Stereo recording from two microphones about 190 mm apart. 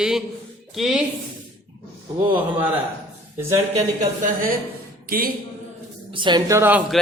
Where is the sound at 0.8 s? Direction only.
5° right (ahead or behind).